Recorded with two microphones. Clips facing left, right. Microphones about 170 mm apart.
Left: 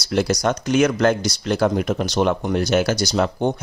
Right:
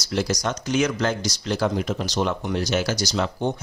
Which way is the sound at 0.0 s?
60° left (ahead or behind).